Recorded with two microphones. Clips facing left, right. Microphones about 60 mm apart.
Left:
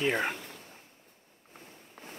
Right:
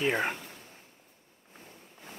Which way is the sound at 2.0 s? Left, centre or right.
Left.